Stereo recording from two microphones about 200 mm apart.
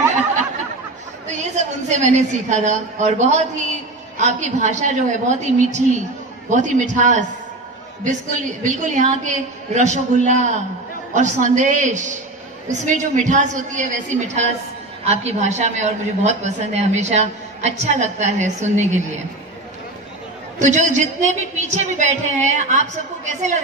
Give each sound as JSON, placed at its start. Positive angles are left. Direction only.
{"t": 1.2, "sound": "a woman's voice", "side_deg": -35}
{"t": 8.6, "sound": "a woman's voice", "side_deg": -40}
{"t": 20.5, "sound": "a woman's voice", "side_deg": -35}